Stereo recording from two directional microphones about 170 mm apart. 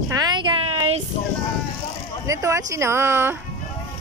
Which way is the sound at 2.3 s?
20° right (ahead or behind).